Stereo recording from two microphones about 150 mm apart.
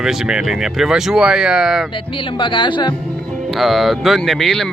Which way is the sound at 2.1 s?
30° left (ahead or behind).